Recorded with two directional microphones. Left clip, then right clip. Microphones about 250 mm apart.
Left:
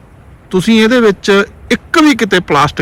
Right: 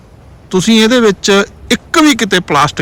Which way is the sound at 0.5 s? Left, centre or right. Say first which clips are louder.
Even; centre.